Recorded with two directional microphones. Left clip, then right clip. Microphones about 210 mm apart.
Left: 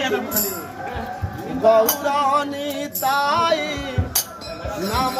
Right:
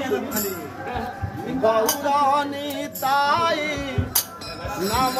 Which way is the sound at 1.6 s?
10° left (ahead or behind).